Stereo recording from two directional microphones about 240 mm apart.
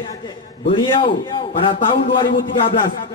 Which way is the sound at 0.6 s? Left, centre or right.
Left.